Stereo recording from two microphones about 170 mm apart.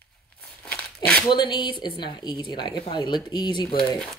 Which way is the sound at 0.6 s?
10° left (ahead or behind).